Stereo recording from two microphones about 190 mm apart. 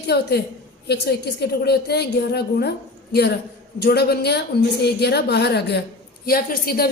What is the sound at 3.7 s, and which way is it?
Speech, 60° left (ahead or behind).